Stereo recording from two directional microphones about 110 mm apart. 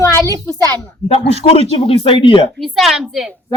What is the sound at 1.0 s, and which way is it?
Speech, 65° left (ahead or behind).